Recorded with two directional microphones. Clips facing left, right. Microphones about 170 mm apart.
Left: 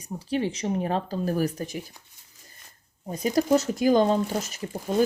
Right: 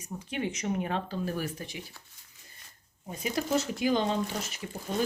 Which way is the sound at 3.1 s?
40° left (ahead or behind).